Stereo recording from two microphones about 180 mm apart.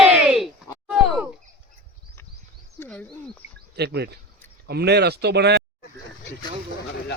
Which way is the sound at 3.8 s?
65° right (ahead or behind).